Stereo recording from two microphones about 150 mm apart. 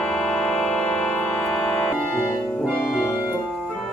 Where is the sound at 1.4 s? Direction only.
5° left (ahead or behind).